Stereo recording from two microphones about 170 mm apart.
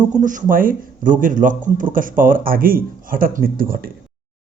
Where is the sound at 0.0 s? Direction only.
50° right (ahead or behind).